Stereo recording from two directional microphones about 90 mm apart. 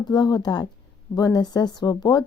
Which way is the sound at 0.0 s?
50° left (ahead or behind).